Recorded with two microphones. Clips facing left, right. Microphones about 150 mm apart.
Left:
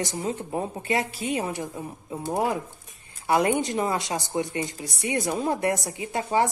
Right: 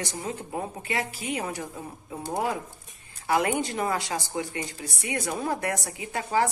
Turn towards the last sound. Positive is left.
turn(degrees=25)  # may be behind; listen again after turning